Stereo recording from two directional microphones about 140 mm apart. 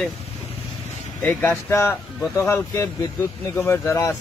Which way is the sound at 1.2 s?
10° left (ahead or behind).